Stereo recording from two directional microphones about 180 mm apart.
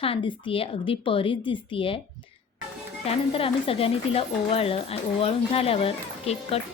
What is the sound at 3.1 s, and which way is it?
A woman's voice, 30° left (ahead or behind).